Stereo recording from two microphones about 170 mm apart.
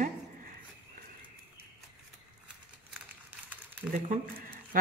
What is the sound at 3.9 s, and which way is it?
Speech, 55° right (ahead or behind).